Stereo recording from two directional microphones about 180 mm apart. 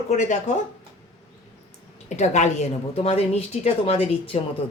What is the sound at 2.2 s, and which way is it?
Speech, 40° left (ahead or behind).